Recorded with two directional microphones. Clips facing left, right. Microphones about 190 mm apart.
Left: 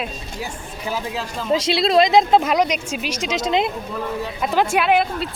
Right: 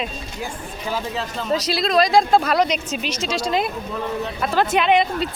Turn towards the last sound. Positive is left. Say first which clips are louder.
# right 1 dB
turn(degrees=5)  # may be behind; listen again after turning